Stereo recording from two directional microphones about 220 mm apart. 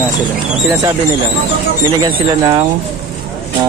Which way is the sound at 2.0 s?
20° right (ahead or behind).